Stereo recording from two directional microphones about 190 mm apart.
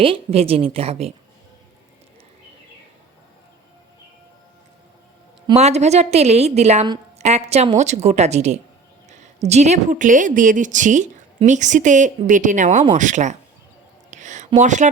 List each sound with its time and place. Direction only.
0.0 s a woman's voice: 30° right (ahead or behind)
5.5 s a woman's voice: 35° right (ahead or behind)
14.1 s a sound: 40° right (ahead or behind)